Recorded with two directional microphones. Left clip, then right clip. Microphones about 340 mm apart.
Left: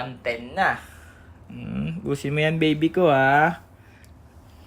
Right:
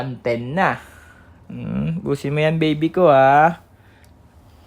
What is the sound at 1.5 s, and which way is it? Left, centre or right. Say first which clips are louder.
Speech: right 5 dB; right.